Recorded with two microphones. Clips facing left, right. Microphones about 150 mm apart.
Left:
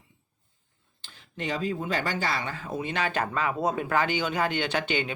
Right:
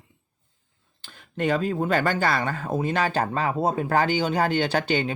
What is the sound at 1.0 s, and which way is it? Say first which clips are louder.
Speech: right 9 dB; 50° right (ahead or behind).